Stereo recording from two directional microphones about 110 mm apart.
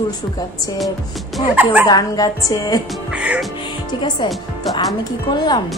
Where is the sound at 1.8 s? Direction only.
35° left (ahead or behind).